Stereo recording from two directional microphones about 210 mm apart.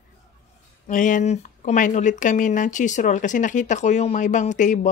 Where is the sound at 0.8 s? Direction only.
40° left (ahead or behind).